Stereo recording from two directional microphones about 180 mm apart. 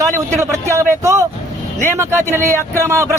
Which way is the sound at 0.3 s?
15° right (ahead or behind).